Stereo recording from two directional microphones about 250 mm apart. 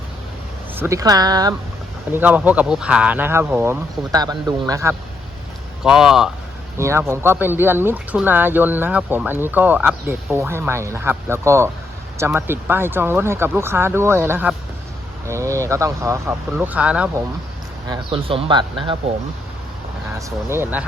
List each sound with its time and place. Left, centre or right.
0.8 s speech: centre
17.8 s speech: centre
20.1 s speech: centre